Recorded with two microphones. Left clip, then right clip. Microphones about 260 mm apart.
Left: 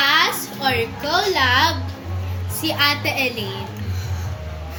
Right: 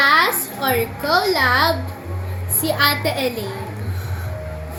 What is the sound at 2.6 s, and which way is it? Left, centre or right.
Speech, centre.